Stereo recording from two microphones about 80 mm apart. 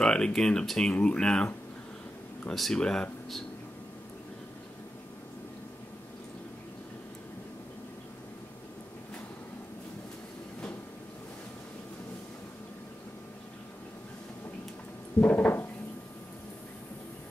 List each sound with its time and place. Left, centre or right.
0.0 s speech: centre
2.5 s speech: centre
15.1 s a sound: left